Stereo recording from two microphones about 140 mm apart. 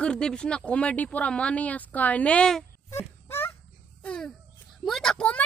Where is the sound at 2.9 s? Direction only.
15° left (ahead or behind).